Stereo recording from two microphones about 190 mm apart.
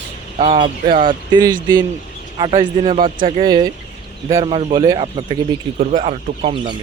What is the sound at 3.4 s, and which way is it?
Speech, 20° right (ahead or behind).